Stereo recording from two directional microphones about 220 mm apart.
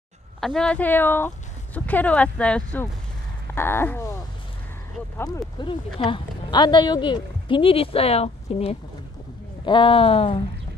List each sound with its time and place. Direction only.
0.4 s speech: centre (ahead or behind)
3.5 s a sound: 10° left (ahead or behind)
5.9 s a woman's voice: 20° left (ahead or behind)